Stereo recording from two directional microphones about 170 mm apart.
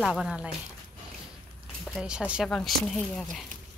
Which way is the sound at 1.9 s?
5° right (ahead or behind).